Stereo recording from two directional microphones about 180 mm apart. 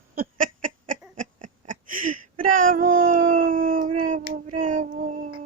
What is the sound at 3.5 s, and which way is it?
Howl, 50° right (ahead or behind).